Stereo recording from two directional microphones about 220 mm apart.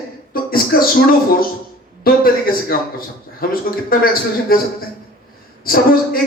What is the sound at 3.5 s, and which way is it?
A man's voice, 40° left (ahead or behind).